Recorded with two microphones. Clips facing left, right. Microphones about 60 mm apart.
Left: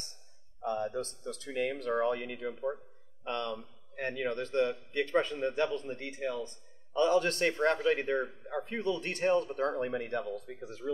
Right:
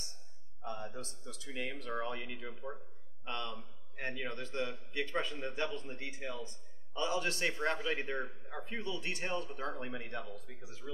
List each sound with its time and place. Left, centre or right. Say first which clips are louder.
0.7 s a man's voice: left 9 dB; left